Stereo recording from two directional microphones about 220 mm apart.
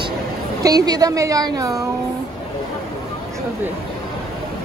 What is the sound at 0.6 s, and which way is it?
A woman's voice, 15° right (ahead or behind).